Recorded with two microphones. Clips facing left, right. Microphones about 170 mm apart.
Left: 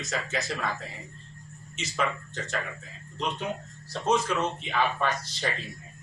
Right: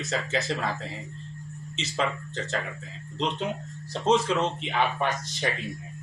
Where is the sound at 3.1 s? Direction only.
20° right (ahead or behind).